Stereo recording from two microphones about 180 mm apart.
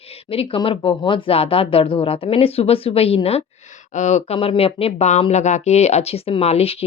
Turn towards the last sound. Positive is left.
turn(degrees=35)  # may be behind; listen again after turning